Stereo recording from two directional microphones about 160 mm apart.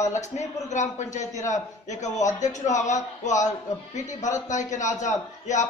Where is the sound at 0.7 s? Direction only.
50° left (ahead or behind).